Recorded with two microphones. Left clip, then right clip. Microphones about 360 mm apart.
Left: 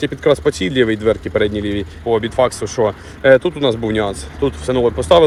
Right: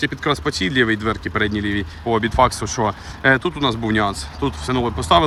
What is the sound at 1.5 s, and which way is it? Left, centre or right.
Speech, right.